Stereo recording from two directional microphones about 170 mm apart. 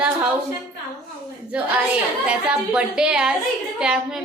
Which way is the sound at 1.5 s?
5° right (ahead or behind).